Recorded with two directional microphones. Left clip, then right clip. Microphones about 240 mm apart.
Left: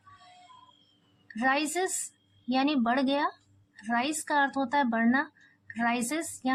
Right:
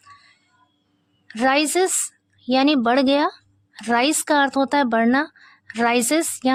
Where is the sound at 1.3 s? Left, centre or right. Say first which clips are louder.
Right 9 dB; right.